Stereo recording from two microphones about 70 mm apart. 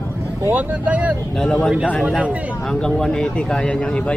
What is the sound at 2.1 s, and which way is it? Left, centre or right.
Speech, centre.